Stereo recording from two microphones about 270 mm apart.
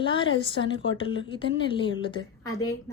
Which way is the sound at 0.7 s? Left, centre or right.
Left.